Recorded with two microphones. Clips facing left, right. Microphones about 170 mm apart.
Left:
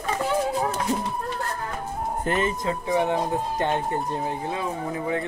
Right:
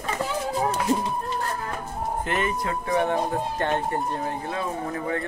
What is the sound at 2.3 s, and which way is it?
Speech, 40° left (ahead or behind).